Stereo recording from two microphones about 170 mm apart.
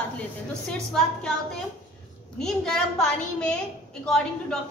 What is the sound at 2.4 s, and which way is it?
A woman's voice, 5° left (ahead or behind).